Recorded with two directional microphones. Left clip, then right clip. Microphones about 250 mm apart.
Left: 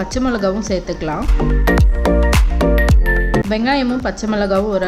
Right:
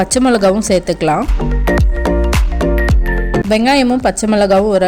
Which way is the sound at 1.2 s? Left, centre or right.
Centre.